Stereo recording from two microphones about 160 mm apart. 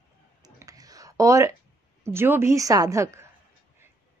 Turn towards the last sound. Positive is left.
turn(degrees=-20)  # may be behind; listen again after turning